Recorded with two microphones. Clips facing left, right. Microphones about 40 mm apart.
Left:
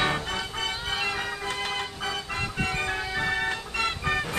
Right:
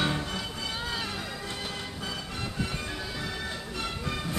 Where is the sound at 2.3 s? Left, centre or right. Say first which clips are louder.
Left 6 dB; left.